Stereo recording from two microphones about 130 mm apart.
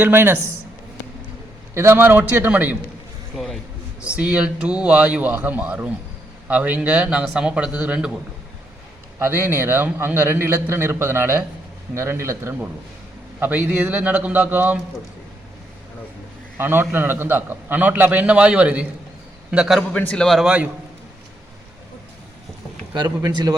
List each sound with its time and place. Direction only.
0.0 s a man's voice: 15° right (ahead or behind)
1.7 s a man's voice: 20° right (ahead or behind)
3.3 s a sound: centre (ahead or behind)
4.0 s a man's voice: 10° right (ahead or behind)
9.1 s a man's voice: 20° right (ahead or behind)
16.6 s a man's voice: 15° right (ahead or behind)
19.9 s a man's voice: 10° left (ahead or behind)
23.0 s a man's voice: 30° right (ahead or behind)